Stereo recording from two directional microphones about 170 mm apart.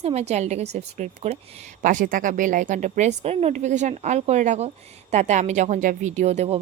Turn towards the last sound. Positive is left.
turn(degrees=-40)  # may be behind; listen again after turning